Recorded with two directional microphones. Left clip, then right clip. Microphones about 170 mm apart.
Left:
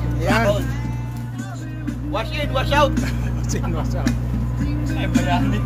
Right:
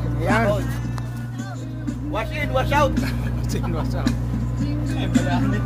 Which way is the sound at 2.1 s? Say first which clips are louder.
Even; 65° right (ahead or behind).